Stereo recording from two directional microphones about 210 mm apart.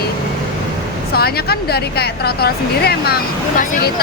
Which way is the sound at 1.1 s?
50° left (ahead or behind).